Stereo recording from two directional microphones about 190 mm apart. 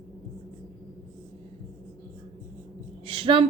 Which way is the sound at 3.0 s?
30° right (ahead or behind).